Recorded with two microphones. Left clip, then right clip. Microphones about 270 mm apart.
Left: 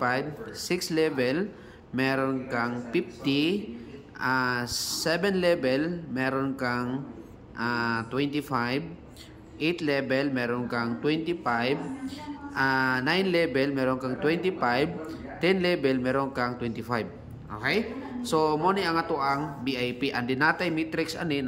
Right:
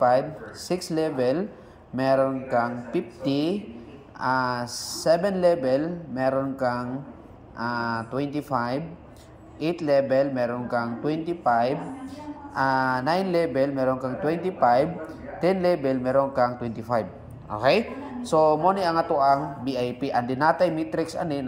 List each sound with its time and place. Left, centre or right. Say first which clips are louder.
0.8 s speech: right 2 dB; centre
4.7 s a woman's voice: left 3 dB; centre
5.0 s speech: right 5 dB; left
9.8 s speech: right 9 dB; centre
16.8 s a sound: right 8 dB; centre
17.6 s speech: right 7 dB; centre
18.3 s speech: right 5 dB; centre
19.6 s a woman's voice: right 2 dB; centre
20.0 s speech: right 3 dB; centre